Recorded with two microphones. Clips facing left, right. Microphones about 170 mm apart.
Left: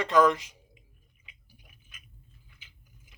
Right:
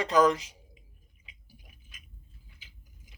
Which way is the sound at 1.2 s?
35° right (ahead or behind).